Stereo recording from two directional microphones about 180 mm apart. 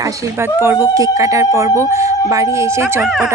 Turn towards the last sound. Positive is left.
turn(degrees=0)  # may be behind; listen again after turning